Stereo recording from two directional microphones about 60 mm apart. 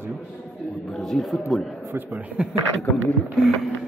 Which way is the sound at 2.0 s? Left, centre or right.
Right.